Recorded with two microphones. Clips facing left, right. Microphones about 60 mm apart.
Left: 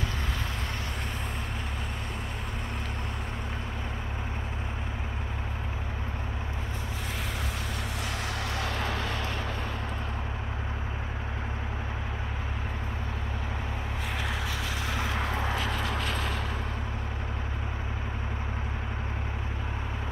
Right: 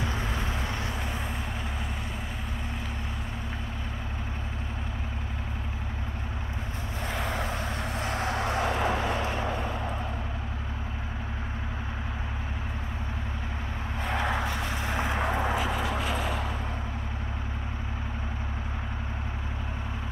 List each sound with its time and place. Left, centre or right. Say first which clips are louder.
8.0 s vehicle: right 7 dB; right
14.1 s vehicle: right 7 dB; right
14.5 s vehicle: right 2 dB; right; by 16.4 s centre